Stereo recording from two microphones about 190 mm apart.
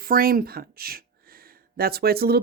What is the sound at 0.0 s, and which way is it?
Speech, 50° right (ahead or behind).